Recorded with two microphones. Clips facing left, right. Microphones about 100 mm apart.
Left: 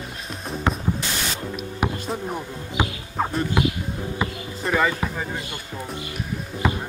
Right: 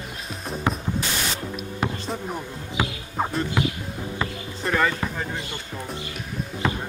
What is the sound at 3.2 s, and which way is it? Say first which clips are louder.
Speech: left 1 dB; 5° right (ahead or behind).